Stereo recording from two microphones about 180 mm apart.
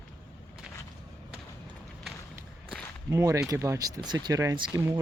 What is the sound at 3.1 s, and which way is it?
Speech, 15° right (ahead or behind).